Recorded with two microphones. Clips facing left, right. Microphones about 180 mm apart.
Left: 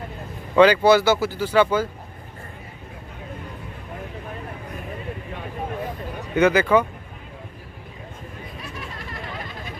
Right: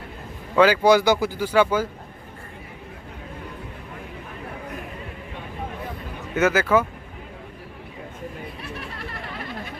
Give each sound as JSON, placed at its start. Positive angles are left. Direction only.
{"t": 0.5, "sound": "speech", "side_deg": -5}
{"t": 6.3, "sound": "speech", "side_deg": -5}
{"t": 8.6, "sound": "a sound", "side_deg": -60}